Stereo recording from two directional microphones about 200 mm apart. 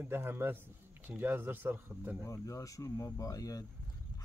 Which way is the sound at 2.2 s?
15° left (ahead or behind).